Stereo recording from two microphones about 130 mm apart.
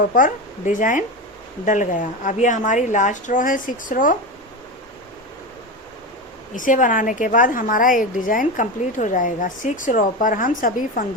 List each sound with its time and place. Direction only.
0.1 s a woman's voice: 85° left
6.6 s a woman's voice: 90° left